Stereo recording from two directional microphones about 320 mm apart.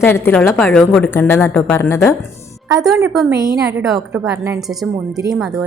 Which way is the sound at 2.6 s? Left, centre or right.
Centre.